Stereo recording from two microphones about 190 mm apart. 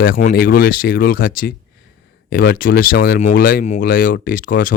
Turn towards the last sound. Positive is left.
turn(degrees=45)  # may be behind; listen again after turning